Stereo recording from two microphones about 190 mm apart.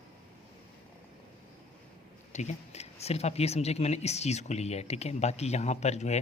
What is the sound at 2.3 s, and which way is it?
Speech, 35° left (ahead or behind).